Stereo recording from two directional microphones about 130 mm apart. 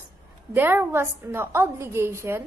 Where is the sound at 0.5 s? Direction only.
15° right (ahead or behind).